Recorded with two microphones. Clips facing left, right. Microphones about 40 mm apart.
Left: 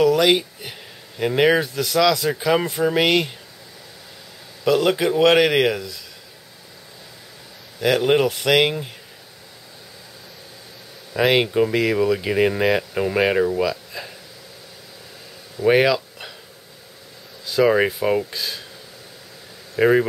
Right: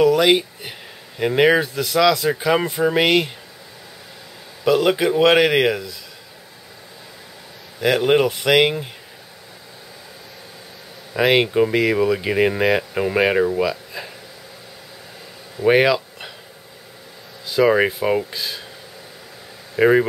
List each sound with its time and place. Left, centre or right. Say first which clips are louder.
0.0 s speech: right 1 dB; centre
4.6 s speech: right 1 dB; centre
7.8 s speech: right 1 dB; centre
11.1 s speech: right 1 dB; centre
15.5 s a sound: right 1 dB; centre
17.5 s speech: right 1 dB; centre
19.7 s speech: right 2 dB; centre